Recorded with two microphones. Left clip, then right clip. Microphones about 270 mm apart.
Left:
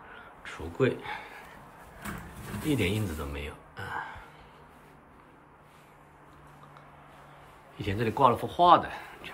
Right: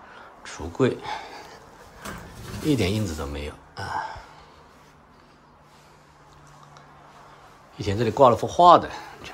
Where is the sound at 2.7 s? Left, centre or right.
Centre.